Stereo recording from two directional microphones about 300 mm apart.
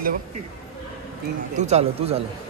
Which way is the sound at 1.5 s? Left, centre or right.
Right.